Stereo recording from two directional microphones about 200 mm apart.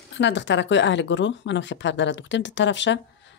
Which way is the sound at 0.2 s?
60° left (ahead or behind).